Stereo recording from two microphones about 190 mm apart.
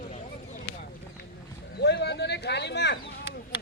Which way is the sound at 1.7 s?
65° left (ahead or behind).